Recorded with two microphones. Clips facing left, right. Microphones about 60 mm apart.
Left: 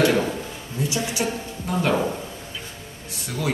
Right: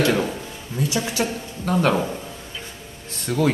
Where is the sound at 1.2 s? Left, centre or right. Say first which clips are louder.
Right 1 dB; right.